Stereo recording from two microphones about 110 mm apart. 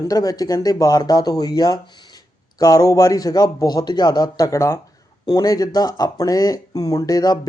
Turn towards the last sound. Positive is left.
turn(degrees=35)  # may be behind; listen again after turning